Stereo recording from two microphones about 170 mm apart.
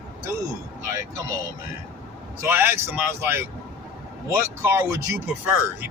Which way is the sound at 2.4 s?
15° right (ahead or behind).